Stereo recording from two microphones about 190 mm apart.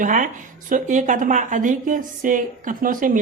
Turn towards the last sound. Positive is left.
turn(degrees=-45)  # may be behind; listen again after turning